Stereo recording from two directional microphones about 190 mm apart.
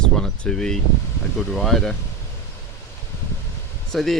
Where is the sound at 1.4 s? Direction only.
Centre (ahead or behind).